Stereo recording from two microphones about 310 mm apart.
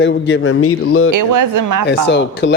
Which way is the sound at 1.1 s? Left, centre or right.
Right.